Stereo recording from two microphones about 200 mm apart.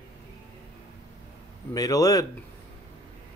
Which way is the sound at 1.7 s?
20° left (ahead or behind).